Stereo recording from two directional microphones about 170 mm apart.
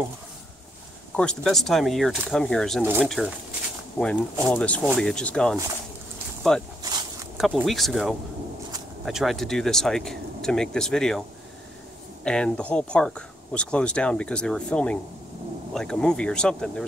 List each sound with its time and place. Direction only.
1.1 s speech: 5° left (ahead or behind)
6.8 s a sound: 25° right (ahead or behind)
7.3 s speech: centre (ahead or behind)
12.3 s speech: 5° left (ahead or behind)